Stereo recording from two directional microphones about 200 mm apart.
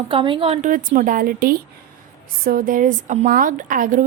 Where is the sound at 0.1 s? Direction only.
25° right (ahead or behind).